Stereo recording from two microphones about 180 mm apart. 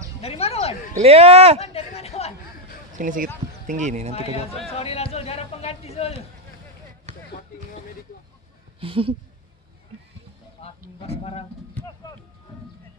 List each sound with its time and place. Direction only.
0.2 s music: 35° left (ahead or behind)
0.9 s speech: 35° right (ahead or behind)
1.6 s a sound: 35° left (ahead or behind)
3.0 s speech: 50° right (ahead or behind)
4.1 s speech: 35° left (ahead or behind)
8.7 s speech: 30° right (ahead or behind)
10.6 s a sound: 35° left (ahead or behind)